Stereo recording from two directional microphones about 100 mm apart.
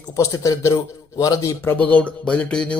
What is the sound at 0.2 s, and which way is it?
A man's voice, 30° left (ahead or behind).